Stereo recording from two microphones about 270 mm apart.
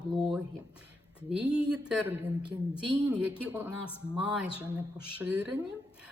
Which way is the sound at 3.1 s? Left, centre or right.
Centre.